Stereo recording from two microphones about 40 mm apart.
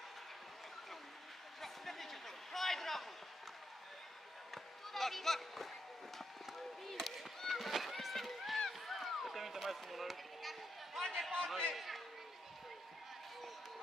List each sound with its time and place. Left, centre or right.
1.6 s a sound: centre
4.9 s speech: centre
6.1 s chop: centre
7.1 s run: centre
11.3 s a man's voice: centre
11.7 s a man's voice: centre